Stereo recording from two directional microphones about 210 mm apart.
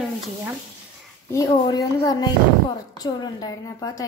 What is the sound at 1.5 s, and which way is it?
A child's voice, 20° left (ahead or behind).